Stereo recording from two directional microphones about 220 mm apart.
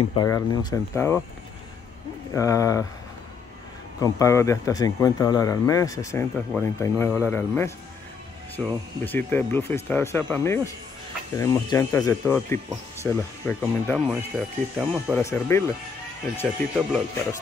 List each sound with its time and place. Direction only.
0.1 s speech: 20° left (ahead or behind)
2.3 s speech: 15° left (ahead or behind)
4.0 s speech: 15° left (ahead or behind); by 15.1 s 5° right (ahead or behind)
15.1 s speech: 10° left (ahead or behind)
16.4 s speech: 5° right (ahead or behind)